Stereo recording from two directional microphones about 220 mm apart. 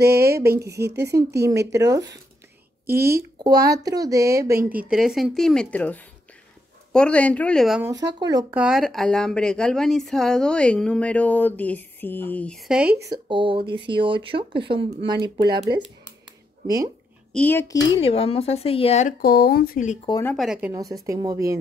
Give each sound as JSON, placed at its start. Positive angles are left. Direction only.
{"t": 0.0, "sound": "speech", "side_deg": -45}
{"t": 0.5, "sound": "a woman's voice", "side_deg": -15}
{"t": 0.7, "sound": "speech", "side_deg": -50}
{"t": 1.7, "sound": "a woman's voice", "side_deg": -15}
{"t": 8.2, "sound": "a woman's voice", "side_deg": -15}
{"t": 8.5, "sound": "a woman's voice", "side_deg": 0}
{"t": 16.6, "sound": "a woman's voice", "side_deg": -15}
{"t": 17.4, "sound": "a child's voice", "side_deg": 10}
{"t": 18.0, "sound": "speech", "side_deg": 25}
{"t": 20.1, "sound": "a child's voice", "side_deg": 15}
{"t": 20.3, "sound": "a woman's voice", "side_deg": -5}
{"t": 20.7, "sound": "a woman's voice", "side_deg": -15}